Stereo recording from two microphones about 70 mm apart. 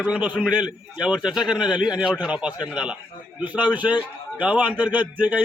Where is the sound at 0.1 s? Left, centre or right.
Centre.